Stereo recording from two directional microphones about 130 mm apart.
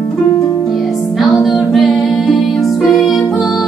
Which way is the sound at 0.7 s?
Centre (ahead or behind).